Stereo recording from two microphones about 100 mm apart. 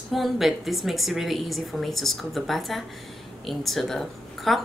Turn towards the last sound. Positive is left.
turn(degrees=0)  # may be behind; listen again after turning